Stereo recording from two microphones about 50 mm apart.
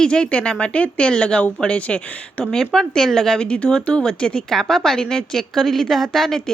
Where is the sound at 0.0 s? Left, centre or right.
Centre.